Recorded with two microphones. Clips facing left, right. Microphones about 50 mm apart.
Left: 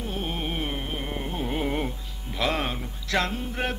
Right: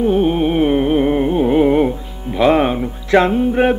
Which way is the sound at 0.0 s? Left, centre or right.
Right.